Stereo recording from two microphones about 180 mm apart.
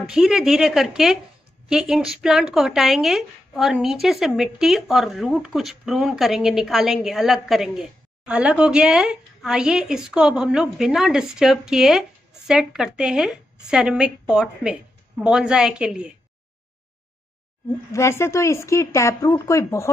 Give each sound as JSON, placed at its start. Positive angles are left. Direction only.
{"t": 0.1, "sound": "speech", "side_deg": -5}
{"t": 17.9, "sound": "speech", "side_deg": 15}